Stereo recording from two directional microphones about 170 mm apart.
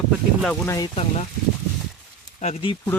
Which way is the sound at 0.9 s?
40° left (ahead or behind).